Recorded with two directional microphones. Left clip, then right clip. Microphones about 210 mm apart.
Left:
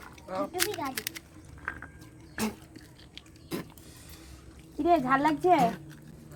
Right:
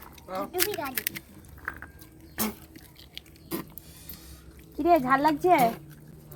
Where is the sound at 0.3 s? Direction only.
45° right (ahead or behind).